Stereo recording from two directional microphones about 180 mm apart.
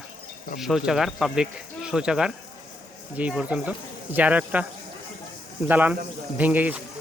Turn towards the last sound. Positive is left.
turn(degrees=-10)  # may be behind; listen again after turning